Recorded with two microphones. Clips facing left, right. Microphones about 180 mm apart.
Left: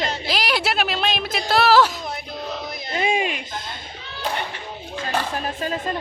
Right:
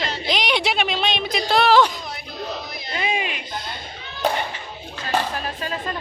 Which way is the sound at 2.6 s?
50° left (ahead or behind).